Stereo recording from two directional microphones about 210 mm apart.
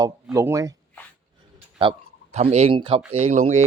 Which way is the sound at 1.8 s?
25° right (ahead or behind).